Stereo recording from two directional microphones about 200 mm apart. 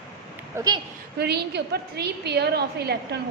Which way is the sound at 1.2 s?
55° right (ahead or behind).